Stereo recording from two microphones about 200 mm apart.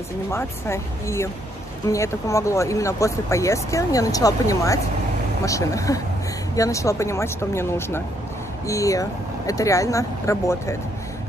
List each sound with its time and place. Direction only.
0.3 s speech: 10° left (ahead or behind)